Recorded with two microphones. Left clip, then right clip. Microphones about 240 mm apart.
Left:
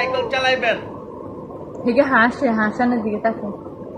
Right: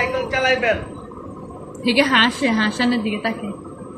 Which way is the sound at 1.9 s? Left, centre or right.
Right.